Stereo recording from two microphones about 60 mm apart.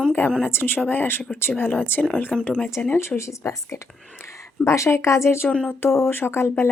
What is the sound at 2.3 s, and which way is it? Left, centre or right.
Speech, centre.